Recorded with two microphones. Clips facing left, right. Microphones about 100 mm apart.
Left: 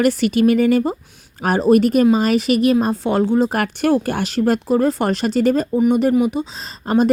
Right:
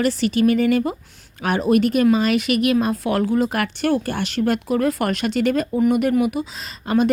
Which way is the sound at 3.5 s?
45° left (ahead or behind).